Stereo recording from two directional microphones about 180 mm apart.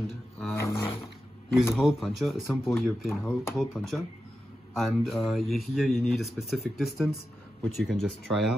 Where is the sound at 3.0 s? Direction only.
15° left (ahead or behind).